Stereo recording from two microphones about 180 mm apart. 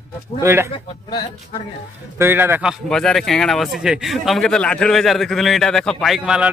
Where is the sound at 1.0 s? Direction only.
25° left (ahead or behind).